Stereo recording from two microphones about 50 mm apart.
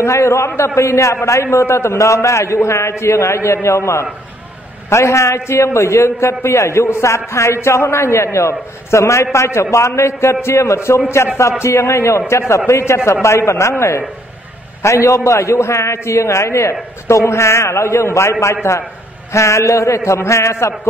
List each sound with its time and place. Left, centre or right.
0.0 s a man's voice: left
1.2 s a man's voice: left
19.3 s a man's voice: left